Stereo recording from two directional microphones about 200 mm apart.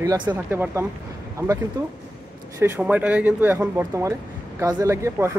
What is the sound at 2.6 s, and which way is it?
Speech, 10° right (ahead or behind).